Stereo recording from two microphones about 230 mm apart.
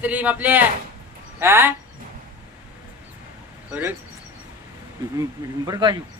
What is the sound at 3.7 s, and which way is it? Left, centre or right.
Speech, centre.